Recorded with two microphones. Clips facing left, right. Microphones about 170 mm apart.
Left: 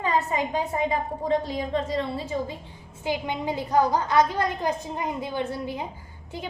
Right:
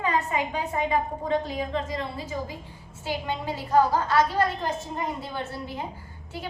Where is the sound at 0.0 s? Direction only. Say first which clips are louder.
Left 1 dB; 35° left (ahead or behind).